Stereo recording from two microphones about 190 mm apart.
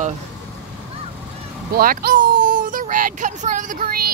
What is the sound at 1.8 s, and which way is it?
Speech, 50° right (ahead or behind).